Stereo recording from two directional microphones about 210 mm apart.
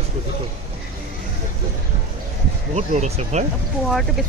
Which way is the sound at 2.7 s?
35° right (ahead or behind).